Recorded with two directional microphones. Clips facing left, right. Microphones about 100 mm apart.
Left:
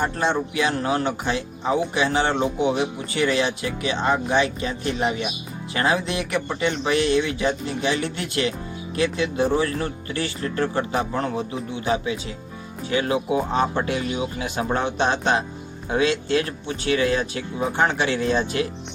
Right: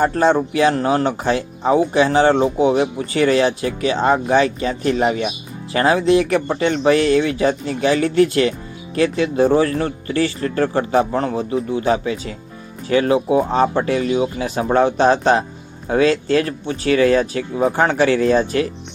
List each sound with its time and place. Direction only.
0.0 s speech: 40° right (ahead or behind)